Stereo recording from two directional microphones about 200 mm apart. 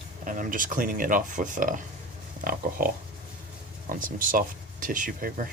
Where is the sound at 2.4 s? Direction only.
45° right (ahead or behind).